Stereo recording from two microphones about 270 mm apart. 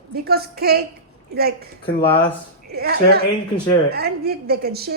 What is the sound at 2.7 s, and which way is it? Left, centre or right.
A woman's voice, right.